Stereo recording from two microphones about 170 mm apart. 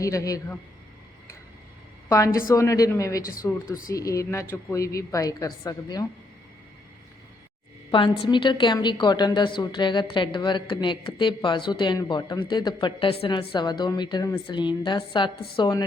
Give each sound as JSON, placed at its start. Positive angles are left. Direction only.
{"t": 0.0, "sound": "a woman's voice", "side_deg": 20}
{"t": 2.0, "sound": "a woman's voice", "side_deg": 20}
{"t": 7.9, "sound": "a woman's voice", "side_deg": 30}